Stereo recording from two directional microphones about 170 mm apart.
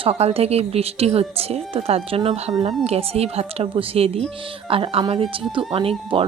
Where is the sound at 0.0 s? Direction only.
40° right (ahead or behind).